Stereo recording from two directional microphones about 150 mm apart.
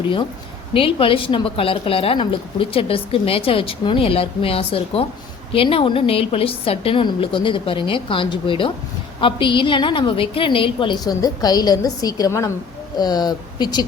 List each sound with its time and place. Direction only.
0.7 s a woman's voice: 35° left (ahead or behind)